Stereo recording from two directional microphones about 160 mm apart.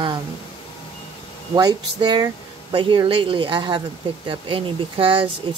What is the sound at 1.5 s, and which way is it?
Speech, 25° right (ahead or behind).